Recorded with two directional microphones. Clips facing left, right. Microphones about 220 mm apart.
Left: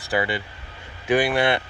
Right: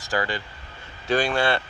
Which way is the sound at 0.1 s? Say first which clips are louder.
Left 3 dB; 15° left (ahead or behind).